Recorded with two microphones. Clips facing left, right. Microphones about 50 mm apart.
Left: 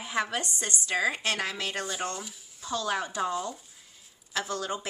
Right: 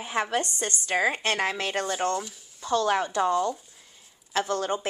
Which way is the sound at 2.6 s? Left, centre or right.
Right.